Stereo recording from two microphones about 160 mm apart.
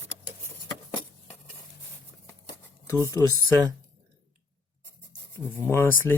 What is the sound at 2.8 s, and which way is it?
Speech, 20° left (ahead or behind).